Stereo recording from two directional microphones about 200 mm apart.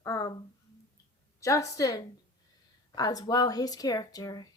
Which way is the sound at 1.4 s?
15° left (ahead or behind).